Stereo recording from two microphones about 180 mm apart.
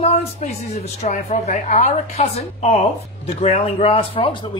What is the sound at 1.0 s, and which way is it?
A woman's voice, 40° left (ahead or behind).